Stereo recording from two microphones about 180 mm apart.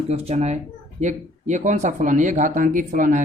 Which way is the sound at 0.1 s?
35° right (ahead or behind).